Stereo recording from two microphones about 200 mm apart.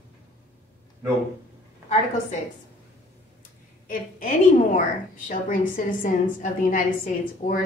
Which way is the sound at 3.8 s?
40° left (ahead or behind).